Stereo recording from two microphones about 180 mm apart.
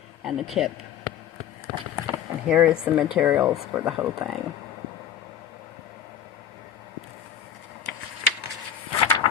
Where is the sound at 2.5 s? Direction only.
10° right (ahead or behind).